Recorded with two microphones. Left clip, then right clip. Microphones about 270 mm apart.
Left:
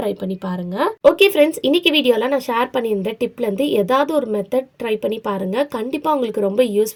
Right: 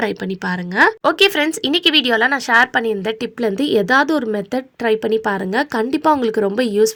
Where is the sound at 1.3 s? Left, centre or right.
Right.